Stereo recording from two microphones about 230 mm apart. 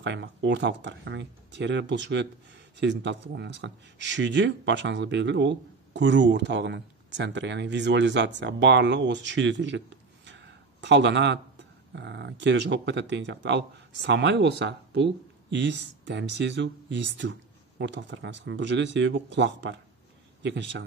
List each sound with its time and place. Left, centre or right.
0.0 s speech: right